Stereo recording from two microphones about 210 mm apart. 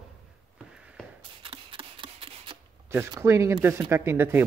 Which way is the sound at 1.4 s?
25° right (ahead or behind).